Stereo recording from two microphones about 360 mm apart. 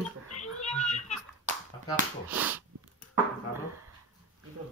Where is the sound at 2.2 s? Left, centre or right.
Centre.